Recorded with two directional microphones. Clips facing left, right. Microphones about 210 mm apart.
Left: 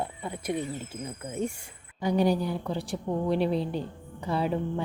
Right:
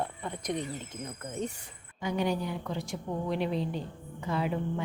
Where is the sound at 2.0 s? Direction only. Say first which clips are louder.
Left 5 dB; 35° left (ahead or behind).